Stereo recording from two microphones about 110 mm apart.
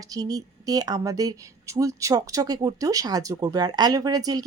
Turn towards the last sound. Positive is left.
turn(degrees=-35)  # may be behind; listen again after turning